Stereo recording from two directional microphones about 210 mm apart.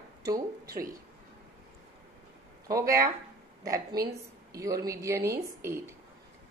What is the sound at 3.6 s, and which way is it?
A woman's voice, 15° right (ahead or behind).